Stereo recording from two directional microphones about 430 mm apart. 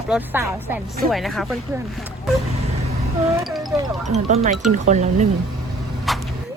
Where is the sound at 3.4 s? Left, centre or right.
Centre.